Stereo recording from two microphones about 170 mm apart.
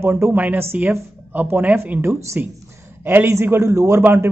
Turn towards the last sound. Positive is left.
turn(degrees=-15)  # may be behind; listen again after turning